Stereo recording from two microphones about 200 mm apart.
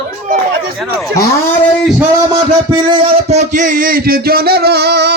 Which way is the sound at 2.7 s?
25° right (ahead or behind).